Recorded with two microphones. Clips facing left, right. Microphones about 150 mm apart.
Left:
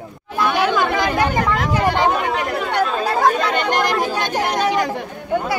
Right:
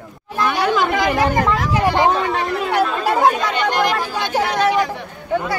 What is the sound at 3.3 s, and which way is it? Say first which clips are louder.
Speech: even; 50° left (ahead or behind).